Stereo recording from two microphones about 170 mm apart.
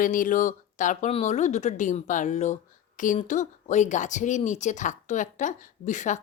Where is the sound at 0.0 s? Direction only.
50° left (ahead or behind).